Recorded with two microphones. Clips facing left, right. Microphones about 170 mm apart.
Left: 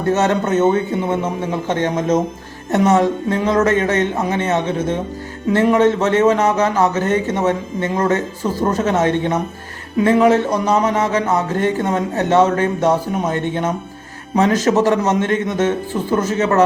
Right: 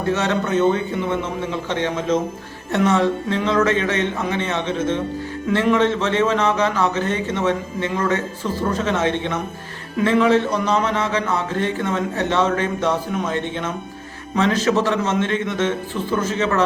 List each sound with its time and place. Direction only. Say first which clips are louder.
0.1 s a man's voice: left 5 dB; 45° left (ahead or behind)